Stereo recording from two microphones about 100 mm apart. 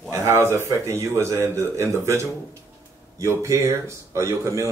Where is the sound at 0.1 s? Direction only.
30° right (ahead or behind).